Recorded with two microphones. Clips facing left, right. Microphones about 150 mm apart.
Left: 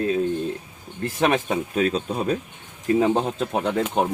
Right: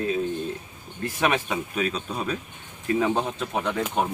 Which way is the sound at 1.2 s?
40° left (ahead or behind).